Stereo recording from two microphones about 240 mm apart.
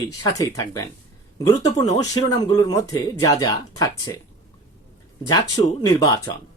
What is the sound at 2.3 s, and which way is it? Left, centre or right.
Speech, centre.